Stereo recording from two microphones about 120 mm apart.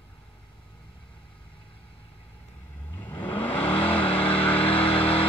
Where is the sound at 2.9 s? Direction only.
20° left (ahead or behind).